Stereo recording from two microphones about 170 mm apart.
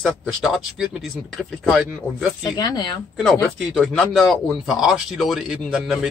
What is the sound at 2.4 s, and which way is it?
Speech, 20° left (ahead or behind).